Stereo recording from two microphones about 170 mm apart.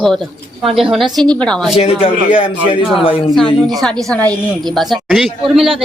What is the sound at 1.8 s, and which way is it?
Speech, 35° left (ahead or behind).